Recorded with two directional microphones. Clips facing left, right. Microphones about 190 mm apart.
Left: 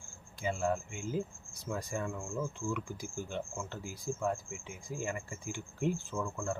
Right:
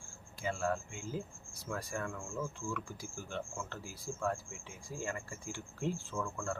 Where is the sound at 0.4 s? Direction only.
20° left (ahead or behind).